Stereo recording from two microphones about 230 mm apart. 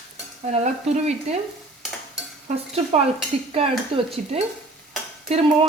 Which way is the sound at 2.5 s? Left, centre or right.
Right.